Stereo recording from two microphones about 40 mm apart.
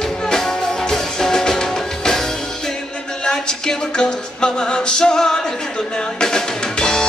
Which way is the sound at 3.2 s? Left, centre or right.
Centre.